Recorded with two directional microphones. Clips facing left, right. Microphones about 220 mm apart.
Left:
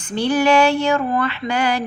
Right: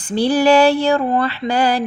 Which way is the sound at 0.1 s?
35° right (ahead or behind).